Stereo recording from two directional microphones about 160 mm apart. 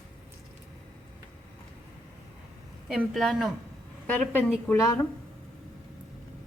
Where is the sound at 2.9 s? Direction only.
Centre (ahead or behind); by 5.1 s 15° left (ahead or behind).